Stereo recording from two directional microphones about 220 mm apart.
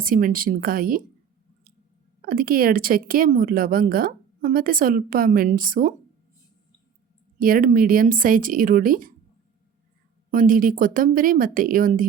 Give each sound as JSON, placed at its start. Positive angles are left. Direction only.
{"t": 0.0, "sound": "a woman's voice", "side_deg": -40}
{"t": 2.2, "sound": "a woman's voice", "side_deg": -40}
{"t": 7.3, "sound": "a woman's voice", "side_deg": -40}
{"t": 10.3, "sound": "a woman's voice", "side_deg": -40}